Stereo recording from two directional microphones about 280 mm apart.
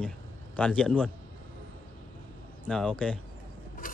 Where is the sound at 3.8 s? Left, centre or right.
Left.